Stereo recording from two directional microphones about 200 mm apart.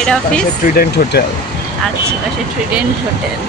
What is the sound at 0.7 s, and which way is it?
Speech, 50° left (ahead or behind).